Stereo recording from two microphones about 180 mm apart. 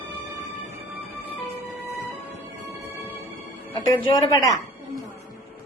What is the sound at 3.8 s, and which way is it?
Speech, 25° left (ahead or behind).